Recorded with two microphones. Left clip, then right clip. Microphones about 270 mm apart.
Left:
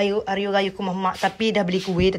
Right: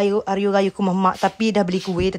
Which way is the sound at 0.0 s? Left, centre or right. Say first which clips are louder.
Right 3 dB; right.